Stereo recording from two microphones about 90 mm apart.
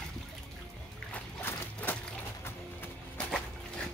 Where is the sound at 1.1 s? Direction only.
20° left (ahead or behind).